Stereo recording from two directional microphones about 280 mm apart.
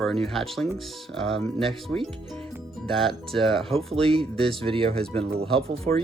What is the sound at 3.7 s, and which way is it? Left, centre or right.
Speech, centre.